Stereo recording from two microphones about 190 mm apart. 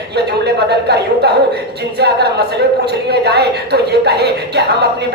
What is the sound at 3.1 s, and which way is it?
A woman's voice, 60° right (ahead or behind).